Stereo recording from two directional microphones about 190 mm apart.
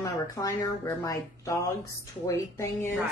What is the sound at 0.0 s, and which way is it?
A woman's voice, 15° left (ahead or behind).